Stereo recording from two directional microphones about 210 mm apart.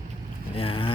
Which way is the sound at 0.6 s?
25° left (ahead or behind).